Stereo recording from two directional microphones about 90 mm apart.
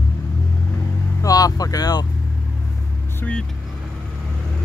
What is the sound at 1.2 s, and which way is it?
Vehicle, 40° left (ahead or behind).